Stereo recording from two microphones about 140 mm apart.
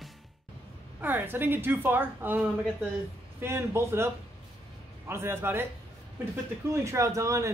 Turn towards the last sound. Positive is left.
turn(degrees=-20)  # may be behind; listen again after turning